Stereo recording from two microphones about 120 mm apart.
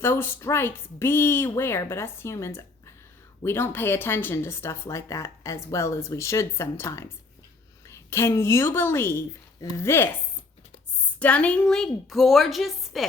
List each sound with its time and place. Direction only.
0.0 s a woman's voice: 20° left (ahead or behind)
11.2 s a woman's voice: 10° left (ahead or behind)